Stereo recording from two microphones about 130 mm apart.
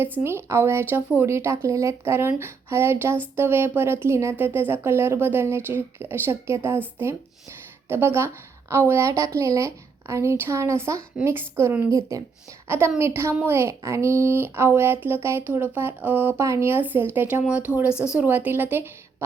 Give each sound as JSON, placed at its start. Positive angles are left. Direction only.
{"t": 0.2, "sound": "a woman's voice", "side_deg": -20}